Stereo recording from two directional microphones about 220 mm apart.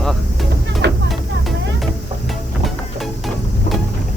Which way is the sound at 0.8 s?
50° right (ahead or behind).